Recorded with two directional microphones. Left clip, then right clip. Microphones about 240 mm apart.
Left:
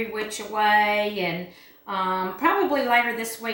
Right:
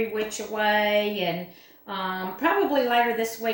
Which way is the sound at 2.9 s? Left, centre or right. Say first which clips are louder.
Left 1 dB; centre.